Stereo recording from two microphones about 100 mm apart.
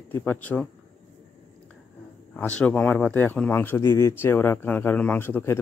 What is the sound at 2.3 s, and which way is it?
Speech, 10° left (ahead or behind).